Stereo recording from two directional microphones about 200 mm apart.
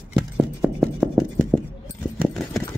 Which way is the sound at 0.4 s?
5° right (ahead or behind).